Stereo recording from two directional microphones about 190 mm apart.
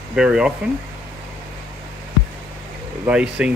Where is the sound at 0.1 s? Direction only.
5° right (ahead or behind).